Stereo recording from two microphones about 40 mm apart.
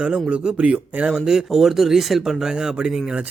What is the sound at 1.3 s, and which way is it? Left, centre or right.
Speech, centre.